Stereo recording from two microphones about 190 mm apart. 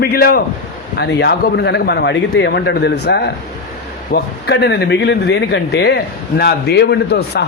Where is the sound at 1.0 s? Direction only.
65° left (ahead or behind).